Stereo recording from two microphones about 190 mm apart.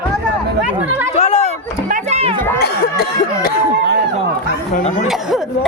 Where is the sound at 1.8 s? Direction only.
35° right (ahead or behind).